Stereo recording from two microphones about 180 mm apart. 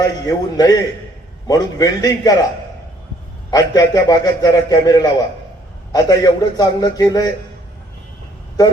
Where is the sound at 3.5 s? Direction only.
20° left (ahead or behind).